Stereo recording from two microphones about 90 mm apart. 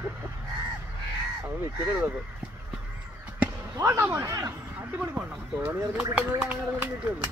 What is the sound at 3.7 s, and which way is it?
Speech, 30° right (ahead or behind).